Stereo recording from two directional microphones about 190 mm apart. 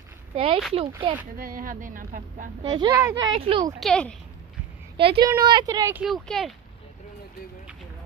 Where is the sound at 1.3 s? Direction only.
45° right (ahead or behind).